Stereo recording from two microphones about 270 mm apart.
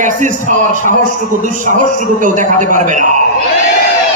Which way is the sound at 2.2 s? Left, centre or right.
Right.